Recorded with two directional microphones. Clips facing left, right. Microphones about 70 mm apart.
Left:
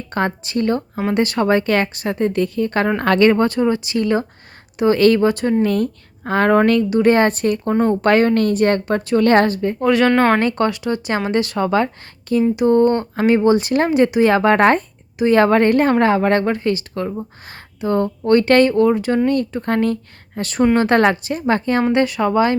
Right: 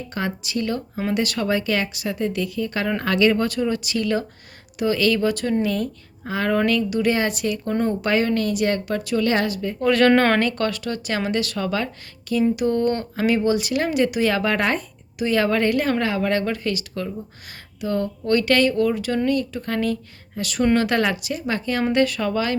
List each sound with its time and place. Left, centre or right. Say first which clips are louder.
0.1 s speech: left 7 dB; left
5.6 s a woman's voice: left 6 dB; left
9.8 s speech: left 2 dB; centre
10.4 s speech: left 5 dB; left
21.9 s speech: left 4 dB; left